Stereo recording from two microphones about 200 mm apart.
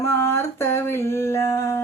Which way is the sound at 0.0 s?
15° left (ahead or behind).